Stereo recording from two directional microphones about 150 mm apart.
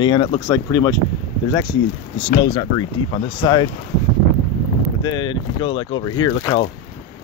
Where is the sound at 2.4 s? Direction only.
30° left (ahead or behind).